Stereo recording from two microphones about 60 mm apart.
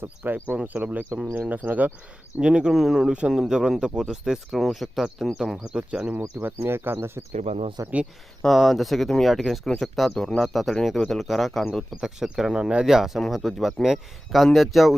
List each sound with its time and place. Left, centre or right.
0.5 s speech: right
2.4 s speech: centre
3.1 s speech: centre
3.3 s speech: centre
6.4 s speech: right
7.8 s speech: right
8.4 s speech: centre
12.0 s speech: centre